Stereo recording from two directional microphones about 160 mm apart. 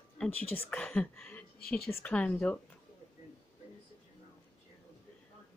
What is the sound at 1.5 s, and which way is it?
Speech, 70° left (ahead or behind).